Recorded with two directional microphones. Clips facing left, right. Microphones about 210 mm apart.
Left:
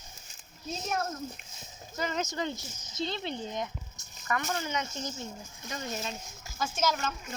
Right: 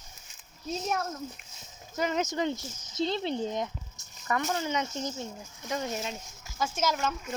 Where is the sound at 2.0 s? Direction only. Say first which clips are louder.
Right 4 dB; 20° right (ahead or behind).